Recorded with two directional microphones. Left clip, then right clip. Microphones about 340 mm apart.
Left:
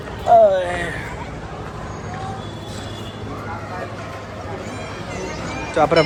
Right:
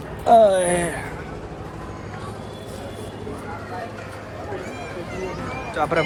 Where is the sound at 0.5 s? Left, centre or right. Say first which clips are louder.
Even; centre.